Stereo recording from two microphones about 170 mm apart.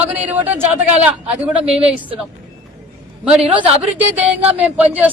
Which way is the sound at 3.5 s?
10° right (ahead or behind).